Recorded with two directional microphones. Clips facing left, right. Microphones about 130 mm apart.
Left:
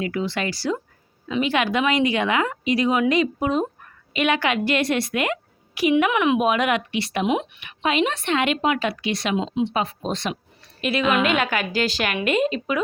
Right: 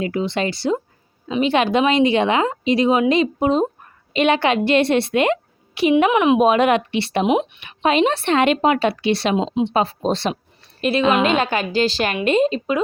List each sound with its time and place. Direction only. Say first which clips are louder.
0.0 s a woman's voice: right 4 dB; 25° right (ahead or behind)